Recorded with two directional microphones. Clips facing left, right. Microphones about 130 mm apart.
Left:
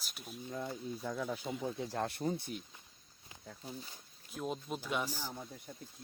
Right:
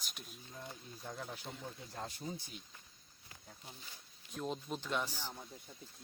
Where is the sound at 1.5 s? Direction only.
90° left; by 2.5 s 60° left (ahead or behind).